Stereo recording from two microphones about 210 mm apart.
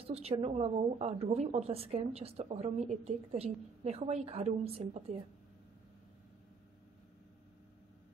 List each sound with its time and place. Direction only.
0.0 s a woman's voice: 30° right (ahead or behind)